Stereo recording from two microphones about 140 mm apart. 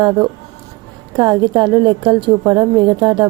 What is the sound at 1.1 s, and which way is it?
A woman's voice, 30° right (ahead or behind).